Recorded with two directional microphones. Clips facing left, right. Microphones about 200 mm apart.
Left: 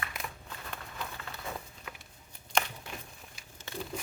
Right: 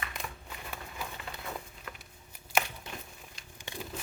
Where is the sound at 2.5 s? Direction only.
5° right (ahead or behind).